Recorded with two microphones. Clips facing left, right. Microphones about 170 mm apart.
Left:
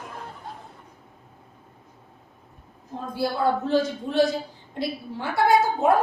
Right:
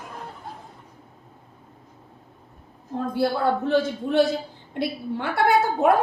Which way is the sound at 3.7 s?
60° right (ahead or behind).